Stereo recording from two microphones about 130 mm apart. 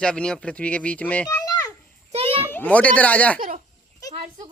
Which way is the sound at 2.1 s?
50° right (ahead or behind).